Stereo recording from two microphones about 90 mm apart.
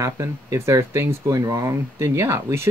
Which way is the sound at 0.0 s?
35° right (ahead or behind).